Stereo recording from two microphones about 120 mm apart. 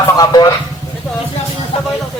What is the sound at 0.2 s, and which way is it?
Speech, 30° left (ahead or behind).